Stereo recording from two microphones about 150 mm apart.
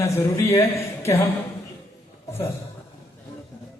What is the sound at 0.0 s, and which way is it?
Speech, 20° left (ahead or behind).